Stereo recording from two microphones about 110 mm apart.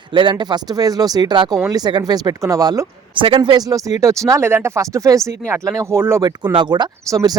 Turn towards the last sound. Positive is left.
turn(degrees=-30)  # may be behind; listen again after turning